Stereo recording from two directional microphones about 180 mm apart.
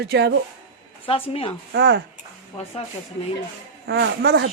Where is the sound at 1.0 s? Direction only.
30° left (ahead or behind).